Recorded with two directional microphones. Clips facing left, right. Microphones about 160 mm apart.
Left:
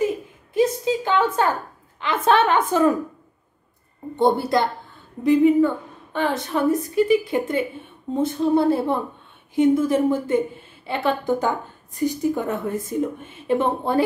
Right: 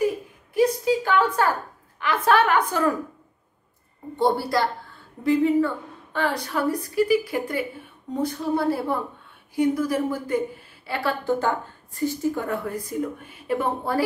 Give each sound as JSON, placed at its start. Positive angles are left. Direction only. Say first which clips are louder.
{"t": 0.6, "sound": "a sound", "louder": "even", "side_deg": 25}
{"t": 2.0, "sound": "a woman's voice", "louder": "left 1 dB", "side_deg": 25}
{"t": 4.2, "sound": "a woman's voice", "louder": "left 3 dB", "side_deg": 20}